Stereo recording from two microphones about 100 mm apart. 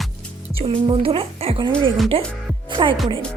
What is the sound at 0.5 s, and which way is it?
Speech, 70° right (ahead or behind).